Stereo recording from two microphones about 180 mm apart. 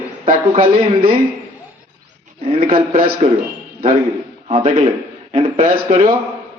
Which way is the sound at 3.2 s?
40° right (ahead or behind).